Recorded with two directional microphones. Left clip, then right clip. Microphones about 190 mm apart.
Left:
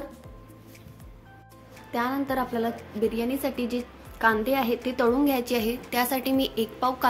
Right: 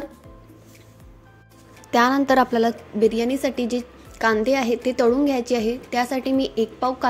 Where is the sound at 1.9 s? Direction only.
40° right (ahead or behind).